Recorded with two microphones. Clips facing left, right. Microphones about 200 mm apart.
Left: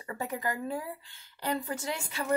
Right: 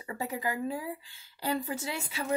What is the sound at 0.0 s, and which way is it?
Speech, 25° right (ahead or behind).